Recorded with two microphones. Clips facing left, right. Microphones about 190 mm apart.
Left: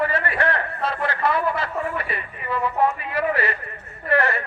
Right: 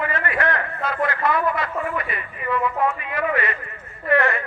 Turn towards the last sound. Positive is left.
turn(degrees=35)  # may be behind; listen again after turning